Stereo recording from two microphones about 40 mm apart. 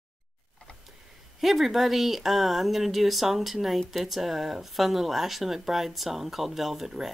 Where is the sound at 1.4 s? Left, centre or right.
Centre.